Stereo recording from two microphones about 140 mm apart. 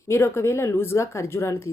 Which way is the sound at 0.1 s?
20° left (ahead or behind).